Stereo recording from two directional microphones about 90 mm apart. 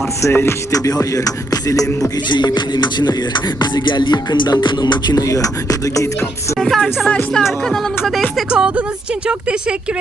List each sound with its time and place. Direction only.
0.2 s music: 30° left (ahead or behind)
0.9 s music: 40° left (ahead or behind)
2.6 s music: 55° left (ahead or behind); by 6.2 s 40° left (ahead or behind)
6.6 s speech: 5° left (ahead or behind)
8.4 s speech: 10° right (ahead or behind)